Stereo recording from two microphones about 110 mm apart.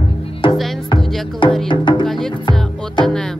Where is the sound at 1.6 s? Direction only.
45° left (ahead or behind).